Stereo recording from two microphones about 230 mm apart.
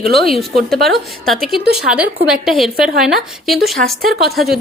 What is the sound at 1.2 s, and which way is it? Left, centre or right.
A woman's voice, centre.